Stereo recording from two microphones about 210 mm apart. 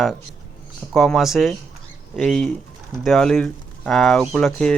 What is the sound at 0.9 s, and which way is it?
Speech, centre (ahead or behind).